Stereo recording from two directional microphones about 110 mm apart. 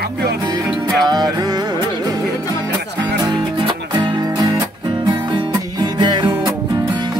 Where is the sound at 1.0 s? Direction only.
35° right (ahead or behind).